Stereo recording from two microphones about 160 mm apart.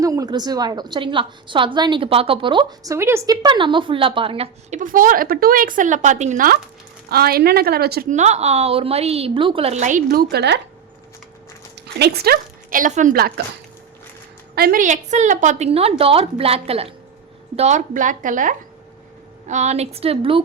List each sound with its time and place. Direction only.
0.0 s a woman's voice: 20° right (ahead or behind)
3.4 s a woman's voice: 30° right (ahead or behind)
4.7 s speech: 55° right (ahead or behind)
7.1 s a woman's voice: 75° right (ahead or behind)
8.1 s a woman's voice: 45° right (ahead or behind); by 10.6 s 90° right
11.9 s a woman's voice: 85° right
14.5 s a woman's voice: 70° right (ahead or behind); by 20.4 s 35° right (ahead or behind)